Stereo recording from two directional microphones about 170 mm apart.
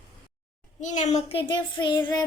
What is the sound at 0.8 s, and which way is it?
Child singing, 45° left (ahead or behind).